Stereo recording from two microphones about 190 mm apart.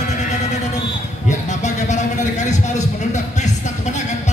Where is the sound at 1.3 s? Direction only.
40° left (ahead or behind).